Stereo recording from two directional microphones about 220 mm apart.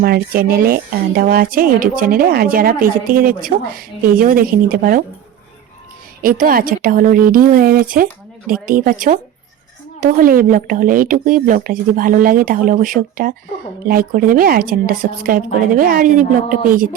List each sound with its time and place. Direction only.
0.0 s speech: 45° right (ahead or behind)
6.2 s speech: 40° right (ahead or behind)